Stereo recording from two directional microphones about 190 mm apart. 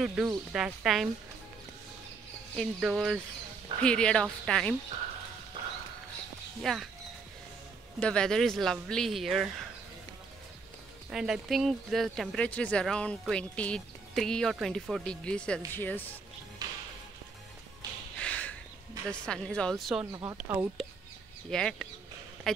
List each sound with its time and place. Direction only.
0.0 s speech: 5° right (ahead or behind)
2.5 s speech: centre (ahead or behind)
6.6 s speech: centre (ahead or behind)
8.0 s speech: 5° left (ahead or behind)
11.1 s speech: 5° right (ahead or behind)
16.6 s music: 20° right (ahead or behind)
18.2 s a sound: 5° left (ahead or behind)
19.0 s speech: 5° left (ahead or behind)
20.1 s speech: 20° right (ahead or behind)
21.5 s speech: 5° left (ahead or behind)